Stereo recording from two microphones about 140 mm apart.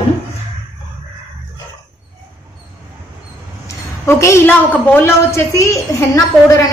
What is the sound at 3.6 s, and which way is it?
A woman's voice, 20° left (ahead or behind).